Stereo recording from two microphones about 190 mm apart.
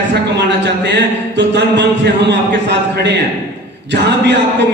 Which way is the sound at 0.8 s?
65° right (ahead or behind).